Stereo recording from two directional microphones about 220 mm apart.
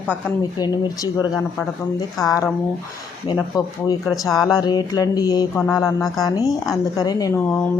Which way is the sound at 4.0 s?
Centre (ahead or behind).